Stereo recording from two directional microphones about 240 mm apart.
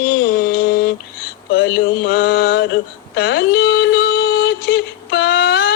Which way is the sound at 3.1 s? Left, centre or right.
Left.